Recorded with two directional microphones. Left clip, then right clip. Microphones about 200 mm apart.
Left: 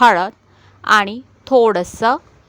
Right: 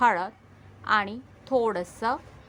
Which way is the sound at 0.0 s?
45° left (ahead or behind).